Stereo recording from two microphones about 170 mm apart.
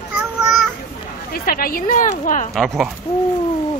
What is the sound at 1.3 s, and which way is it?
Speech, 60° left (ahead or behind).